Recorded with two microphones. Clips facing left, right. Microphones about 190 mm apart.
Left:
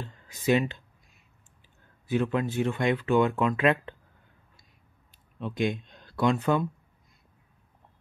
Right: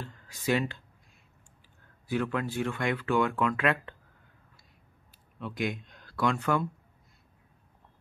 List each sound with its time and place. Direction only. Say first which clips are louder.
0.0 s speech: left 4 dB; 20° left (ahead or behind)
2.0 s speech: left 4 dB; 20° left (ahead or behind)
5.4 s speech: left 4 dB; 25° left (ahead or behind)